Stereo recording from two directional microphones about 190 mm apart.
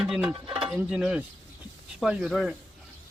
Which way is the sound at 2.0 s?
5° right (ahead or behind).